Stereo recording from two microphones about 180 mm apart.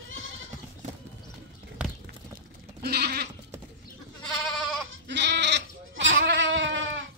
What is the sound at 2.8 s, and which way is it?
Goat, 60° right (ahead or behind).